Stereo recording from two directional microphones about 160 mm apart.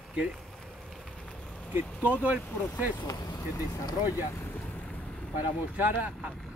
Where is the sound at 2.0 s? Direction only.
10° right (ahead or behind).